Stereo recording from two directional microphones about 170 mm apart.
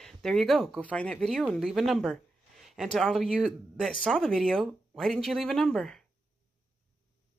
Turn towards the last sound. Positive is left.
turn(degrees=5)  # may be behind; listen again after turning